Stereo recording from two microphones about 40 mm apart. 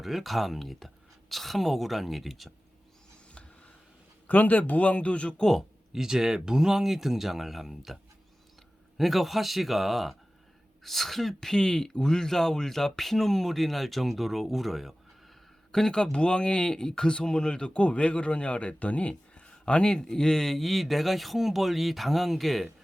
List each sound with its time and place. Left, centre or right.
0.0 s speech: centre
4.3 s speech: left
5.9 s speech: centre
9.0 s speech: centre
11.3 s speech: centre
15.7 s speech: centre